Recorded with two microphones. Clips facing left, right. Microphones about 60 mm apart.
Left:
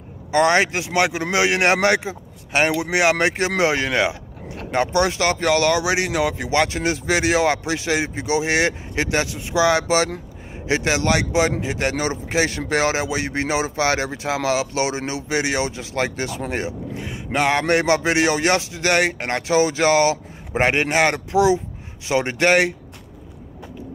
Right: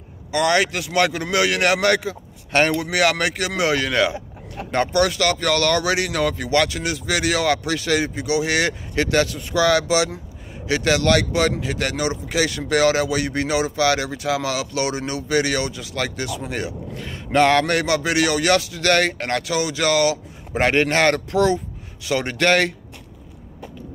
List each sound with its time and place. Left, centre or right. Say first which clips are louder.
0.3 s a man's voice: left 2 dB; left
9.8 s speech: left 1 dB; left
10.7 s a man's voice: right 2 dB; left
17.1 s a man's voice: right 4 dB; centre
22.0 s a man's voice: left 1 dB; left